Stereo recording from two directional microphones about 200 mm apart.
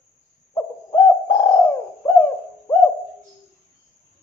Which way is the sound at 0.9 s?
15° left (ahead or behind).